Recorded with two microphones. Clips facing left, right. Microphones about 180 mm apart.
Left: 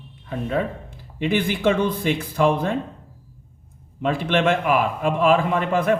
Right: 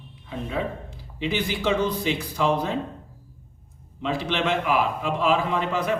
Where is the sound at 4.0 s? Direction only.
50° left (ahead or behind).